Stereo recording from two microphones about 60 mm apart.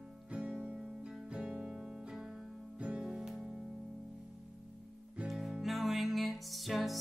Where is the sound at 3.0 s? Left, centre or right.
Centre.